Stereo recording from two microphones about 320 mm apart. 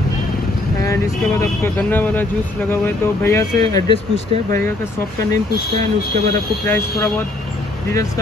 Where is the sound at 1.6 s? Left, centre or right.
Centre.